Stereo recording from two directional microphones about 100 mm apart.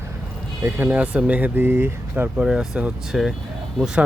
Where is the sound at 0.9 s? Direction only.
15° right (ahead or behind).